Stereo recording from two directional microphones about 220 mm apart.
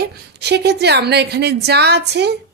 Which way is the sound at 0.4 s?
50° right (ahead or behind).